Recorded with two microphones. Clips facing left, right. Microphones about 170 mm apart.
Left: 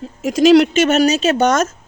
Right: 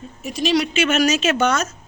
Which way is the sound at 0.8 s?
40° left (ahead or behind).